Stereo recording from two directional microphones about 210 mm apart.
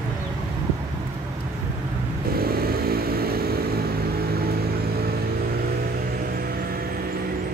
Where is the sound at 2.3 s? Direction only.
45° right (ahead or behind).